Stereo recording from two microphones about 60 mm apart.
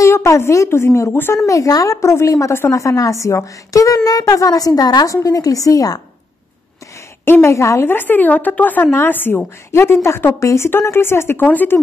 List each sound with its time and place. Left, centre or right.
0.0 s a woman's voice: left
1.3 s a woman's voice: left
2.0 s a woman's voice: left
7.2 s speech: left
7.5 s a woman's voice: left
7.9 s a woman's voice: left